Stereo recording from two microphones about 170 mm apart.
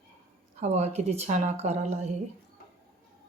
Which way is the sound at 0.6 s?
40° right (ahead or behind).